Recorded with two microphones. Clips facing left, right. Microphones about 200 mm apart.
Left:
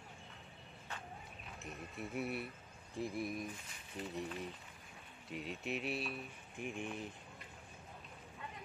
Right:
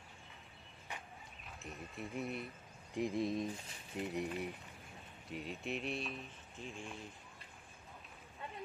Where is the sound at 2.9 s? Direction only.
20° right (ahead or behind).